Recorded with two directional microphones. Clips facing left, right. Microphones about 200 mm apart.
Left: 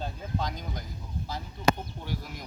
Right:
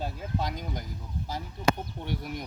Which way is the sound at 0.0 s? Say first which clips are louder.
Right 1 dB; 10° right (ahead or behind).